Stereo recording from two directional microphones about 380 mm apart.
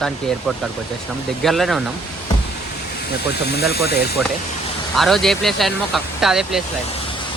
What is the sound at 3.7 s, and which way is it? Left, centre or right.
Speech, left.